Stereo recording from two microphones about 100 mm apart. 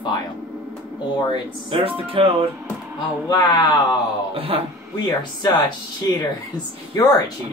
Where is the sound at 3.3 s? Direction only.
45° left (ahead or behind).